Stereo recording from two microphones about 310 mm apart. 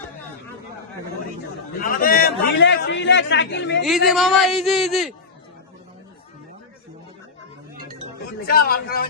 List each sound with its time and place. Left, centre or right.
1.9 s a man's voice: left
3.8 s speech: centre
8.4 s a man's voice: left